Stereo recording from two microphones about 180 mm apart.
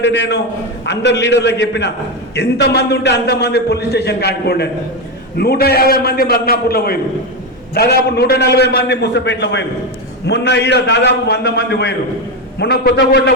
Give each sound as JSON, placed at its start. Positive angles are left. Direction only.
{"t": 0.0, "sound": "a man's voice", "side_deg": 75}